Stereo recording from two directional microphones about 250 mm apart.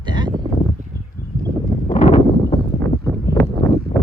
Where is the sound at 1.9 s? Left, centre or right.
Left.